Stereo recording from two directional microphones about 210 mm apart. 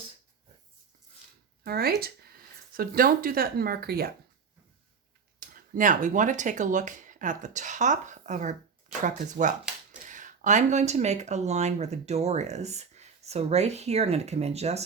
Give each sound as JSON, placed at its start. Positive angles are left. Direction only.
{"t": 1.6, "sound": "speech", "side_deg": -45}
{"t": 5.4, "sound": "speech", "side_deg": -40}